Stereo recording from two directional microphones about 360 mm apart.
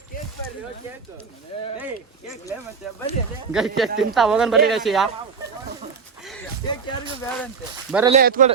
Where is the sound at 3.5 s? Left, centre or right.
Centre.